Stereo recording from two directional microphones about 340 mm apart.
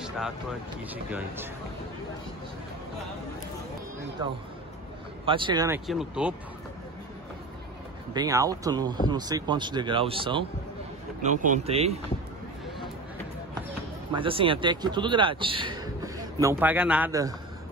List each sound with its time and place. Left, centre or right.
0.0 s speech: centre
5.2 s a man's voice: centre
8.1 s a man's voice: centre
14.1 s a man's voice: centre